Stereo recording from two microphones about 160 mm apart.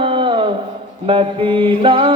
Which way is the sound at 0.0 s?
35° right (ahead or behind).